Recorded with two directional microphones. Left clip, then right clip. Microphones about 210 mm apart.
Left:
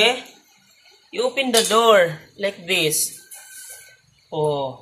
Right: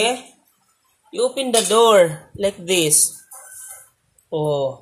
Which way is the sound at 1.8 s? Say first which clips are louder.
Right 3 dB; 55° right (ahead or behind).